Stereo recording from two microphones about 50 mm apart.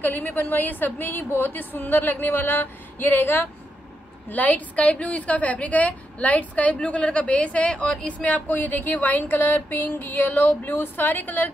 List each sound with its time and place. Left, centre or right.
0.0 s a woman's voice: left; by 8.1 s centre
8.1 s a woman's voice: left